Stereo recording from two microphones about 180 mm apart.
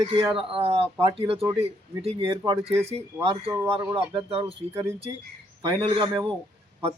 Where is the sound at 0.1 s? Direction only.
25° right (ahead or behind).